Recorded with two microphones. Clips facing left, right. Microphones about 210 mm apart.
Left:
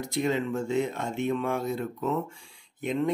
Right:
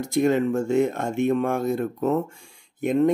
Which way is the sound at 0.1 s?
50° right (ahead or behind).